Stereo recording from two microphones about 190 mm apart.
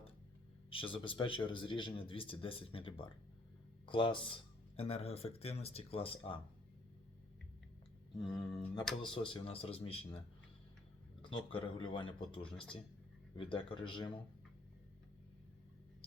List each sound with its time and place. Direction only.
0.7 s speech: 25° left (ahead or behind)
8.2 s speech: 20° left (ahead or behind)
12.5 s speech: 5° left (ahead or behind)
13.3 s speech: 25° left (ahead or behind)